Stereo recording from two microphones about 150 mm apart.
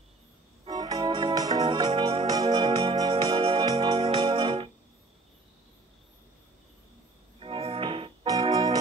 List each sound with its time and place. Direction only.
0.7 s organ: 25° right (ahead or behind)
1.0 s music: 35° right (ahead or behind)
1.7 s music: 40° right (ahead or behind)
2.6 s organ: 40° right (ahead or behind)
7.3 s music: 40° right (ahead or behind)
8.3 s music: 25° right (ahead or behind)